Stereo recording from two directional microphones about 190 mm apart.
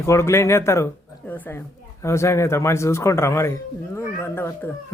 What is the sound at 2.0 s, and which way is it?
Speech, 15° left (ahead or behind).